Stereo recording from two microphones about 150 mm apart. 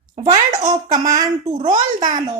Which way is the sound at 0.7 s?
30° right (ahead or behind).